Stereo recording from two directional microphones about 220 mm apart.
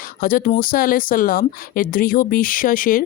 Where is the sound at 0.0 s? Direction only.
40° left (ahead or behind).